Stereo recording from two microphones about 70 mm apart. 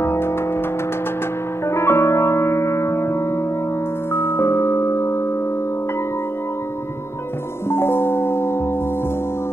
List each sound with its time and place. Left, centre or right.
0.0 s music: left
1.7 s music: left
7.7 s music: left